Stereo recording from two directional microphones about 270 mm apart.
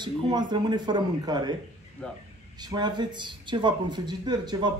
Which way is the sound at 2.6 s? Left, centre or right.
Centre.